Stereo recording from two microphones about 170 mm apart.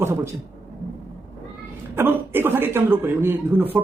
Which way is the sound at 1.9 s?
15° right (ahead or behind).